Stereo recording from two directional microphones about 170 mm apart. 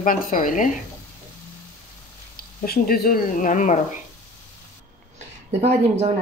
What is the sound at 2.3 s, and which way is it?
Speech, 60° left (ahead or behind).